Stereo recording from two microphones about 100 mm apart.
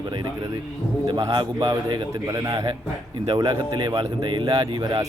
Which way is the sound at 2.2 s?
40° right (ahead or behind).